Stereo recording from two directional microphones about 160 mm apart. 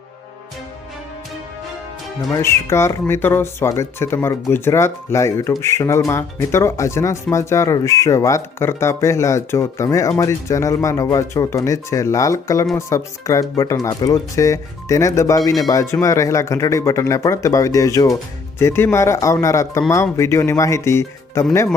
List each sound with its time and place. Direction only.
2.3 s speech: 15° left (ahead or behind)